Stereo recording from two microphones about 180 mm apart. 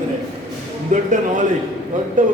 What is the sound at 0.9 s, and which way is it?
A man's voice, 45° right (ahead or behind).